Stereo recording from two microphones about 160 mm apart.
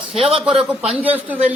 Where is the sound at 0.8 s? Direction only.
35° right (ahead or behind).